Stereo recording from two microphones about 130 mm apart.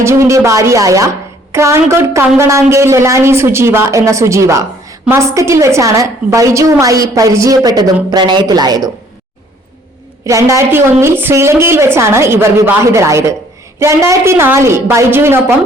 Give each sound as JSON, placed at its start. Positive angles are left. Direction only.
{"t": 0.0, "sound": "a woman's voice", "side_deg": -20}
{"t": 10.2, "sound": "a woman's voice", "side_deg": -25}